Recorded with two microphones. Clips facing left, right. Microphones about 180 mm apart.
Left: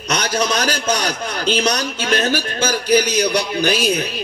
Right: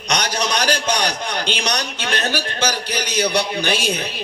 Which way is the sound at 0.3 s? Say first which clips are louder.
Left 3 dB; 45° left (ahead or behind).